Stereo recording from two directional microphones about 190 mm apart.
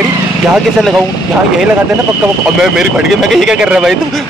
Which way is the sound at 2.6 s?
Centre (ahead or behind).